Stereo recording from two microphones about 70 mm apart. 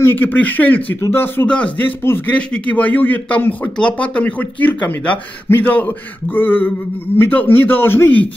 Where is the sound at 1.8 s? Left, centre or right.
Left.